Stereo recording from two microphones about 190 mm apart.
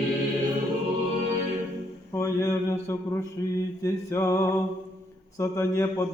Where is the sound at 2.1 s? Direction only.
15° left (ahead or behind).